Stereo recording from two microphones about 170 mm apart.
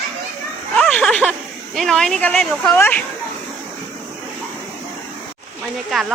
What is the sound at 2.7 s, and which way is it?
Speech, 10° left (ahead or behind).